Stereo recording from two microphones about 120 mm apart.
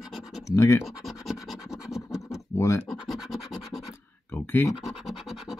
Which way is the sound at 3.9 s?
20° left (ahead or behind).